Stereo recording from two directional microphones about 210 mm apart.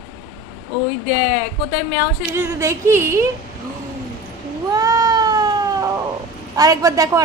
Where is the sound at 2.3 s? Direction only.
10° right (ahead or behind).